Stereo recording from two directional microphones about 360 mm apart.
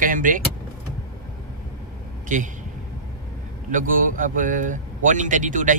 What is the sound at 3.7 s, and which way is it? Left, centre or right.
Speech, right.